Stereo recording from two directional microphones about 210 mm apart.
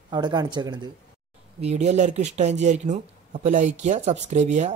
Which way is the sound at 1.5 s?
30° right (ahead or behind).